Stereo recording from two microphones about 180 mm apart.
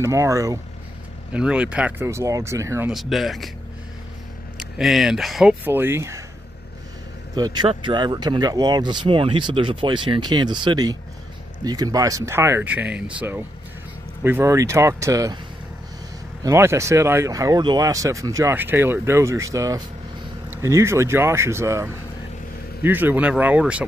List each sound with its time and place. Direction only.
0.0 s speech: 15° right (ahead or behind)
1.3 s speech: 5° right (ahead or behind)
2.9 s speech: centre (ahead or behind)
4.6 s speech: centre (ahead or behind)
7.3 s speech: 25° right (ahead or behind)
16.4 s speech: 15° right (ahead or behind)